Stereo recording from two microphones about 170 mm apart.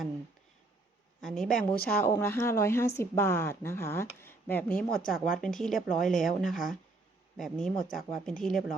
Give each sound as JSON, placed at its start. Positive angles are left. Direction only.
{"t": 1.2, "sound": "speech", "side_deg": 5}